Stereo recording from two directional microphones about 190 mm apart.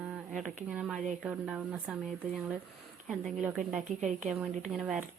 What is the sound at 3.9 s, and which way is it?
Speech, 40° right (ahead or behind).